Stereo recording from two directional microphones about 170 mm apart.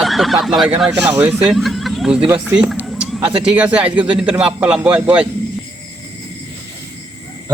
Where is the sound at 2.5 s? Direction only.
5° right (ahead or behind).